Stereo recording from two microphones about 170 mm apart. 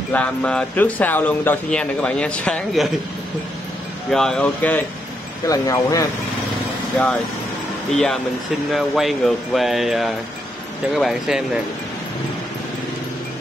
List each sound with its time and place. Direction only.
0.1 s speech: 5° left (ahead or behind)
4.1 s speech: 5° left (ahead or behind)
5.5 s speech: 20° left (ahead or behind)
7.9 s speech: 5° left (ahead or behind)